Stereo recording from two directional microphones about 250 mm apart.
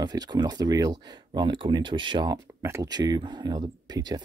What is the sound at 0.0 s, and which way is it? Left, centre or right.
Speech, centre.